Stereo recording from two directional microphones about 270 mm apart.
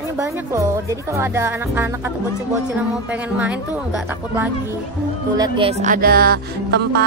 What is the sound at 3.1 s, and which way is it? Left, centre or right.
A woman's voice, centre.